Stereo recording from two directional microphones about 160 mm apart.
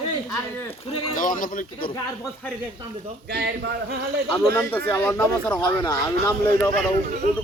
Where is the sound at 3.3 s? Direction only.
85° right.